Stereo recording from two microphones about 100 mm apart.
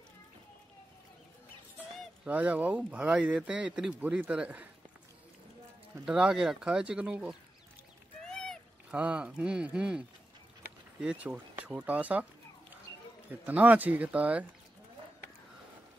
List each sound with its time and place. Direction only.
2.2 s speech: 15° right (ahead or behind)
6.0 s speech: 10° right (ahead or behind)
8.2 s a sound: 5° left (ahead or behind)
8.9 s speech: 10° right (ahead or behind)
13.3 s speech: 15° right (ahead or behind)